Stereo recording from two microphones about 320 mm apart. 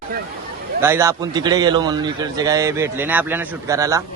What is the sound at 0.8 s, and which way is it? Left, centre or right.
A man's voice, centre.